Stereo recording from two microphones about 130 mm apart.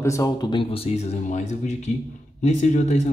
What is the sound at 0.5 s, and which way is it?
Speech, 45° left (ahead or behind).